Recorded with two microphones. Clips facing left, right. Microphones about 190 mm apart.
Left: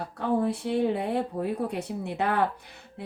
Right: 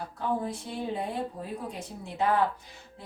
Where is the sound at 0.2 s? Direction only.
65° left (ahead or behind).